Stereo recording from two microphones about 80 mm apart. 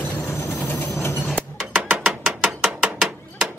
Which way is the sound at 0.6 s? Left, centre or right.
Left.